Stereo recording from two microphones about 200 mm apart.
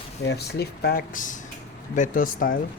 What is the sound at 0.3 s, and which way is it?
Speech, 55° left (ahead or behind).